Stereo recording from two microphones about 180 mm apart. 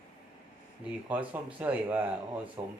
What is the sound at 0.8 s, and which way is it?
Speech, 10° right (ahead or behind).